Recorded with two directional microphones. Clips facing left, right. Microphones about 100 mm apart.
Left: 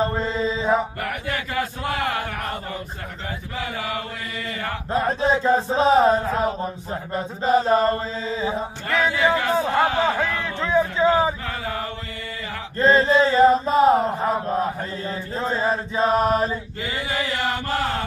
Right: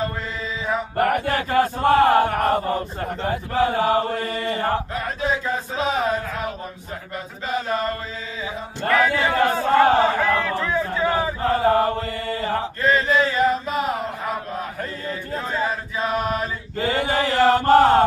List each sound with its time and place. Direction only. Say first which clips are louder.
0.0 s mantra: left 5 dB; 30° left (ahead or behind)
0.9 s chant: right 8 dB; 45° right (ahead or behind)
4.9 s chant: left 4 dB; 30° left (ahead or behind)
8.8 s speech: right 2 dB; 45° right (ahead or behind)
10.6 s a sound: left 3 dB; 25° left (ahead or behind)
11.4 s speech: right 11 dB; 40° right (ahead or behind)
12.8 s chant: left 4 dB; 30° left (ahead or behind)
16.9 s speech: right 5 dB; 50° right (ahead or behind)